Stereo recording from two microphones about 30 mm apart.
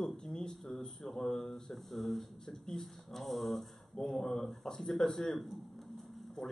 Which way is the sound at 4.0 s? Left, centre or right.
Centre.